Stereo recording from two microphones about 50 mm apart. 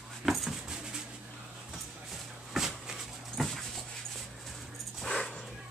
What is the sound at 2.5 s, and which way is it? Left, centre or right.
Dog, centre.